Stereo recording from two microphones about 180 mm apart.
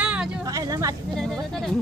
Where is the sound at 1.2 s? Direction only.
Centre (ahead or behind).